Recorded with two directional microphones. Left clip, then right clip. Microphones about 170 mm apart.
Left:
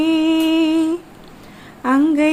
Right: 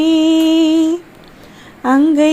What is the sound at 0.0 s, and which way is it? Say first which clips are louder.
Music: right 4 dB; 20° right (ahead or behind).